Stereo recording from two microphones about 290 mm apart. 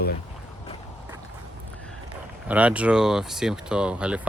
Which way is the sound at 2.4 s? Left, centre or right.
Centre.